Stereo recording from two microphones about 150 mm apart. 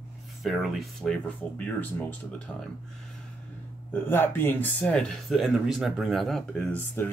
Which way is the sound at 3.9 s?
15° left (ahead or behind).